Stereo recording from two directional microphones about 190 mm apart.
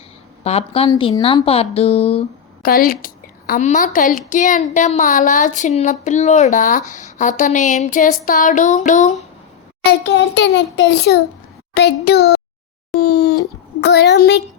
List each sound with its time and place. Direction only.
0.4 s speech: 30° left (ahead or behind)
2.6 s a woman's voice: 50° left (ahead or behind)
10.3 s a child's voice: 75° left (ahead or behind); by 12.4 s 60° left (ahead or behind)
13.0 s a sound: 55° left (ahead or behind)
13.8 s a woman's voice: 65° left (ahead or behind)